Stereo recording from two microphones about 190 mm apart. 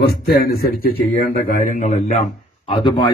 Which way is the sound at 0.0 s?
55° left (ahead or behind).